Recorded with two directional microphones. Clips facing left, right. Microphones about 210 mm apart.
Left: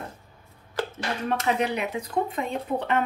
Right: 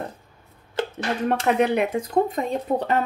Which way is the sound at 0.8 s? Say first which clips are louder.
Right 3 dB; 25° right (ahead or behind).